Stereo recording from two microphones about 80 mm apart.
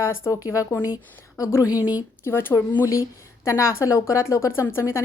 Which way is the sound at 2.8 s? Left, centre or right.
Left.